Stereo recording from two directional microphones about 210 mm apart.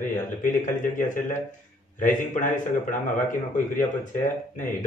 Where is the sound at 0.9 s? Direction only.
40° left (ahead or behind).